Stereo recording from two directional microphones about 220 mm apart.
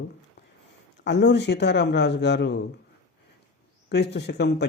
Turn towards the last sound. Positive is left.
turn(degrees=50)  # may be behind; listen again after turning